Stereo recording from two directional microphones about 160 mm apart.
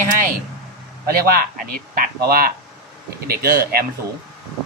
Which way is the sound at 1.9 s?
70° right (ahead or behind).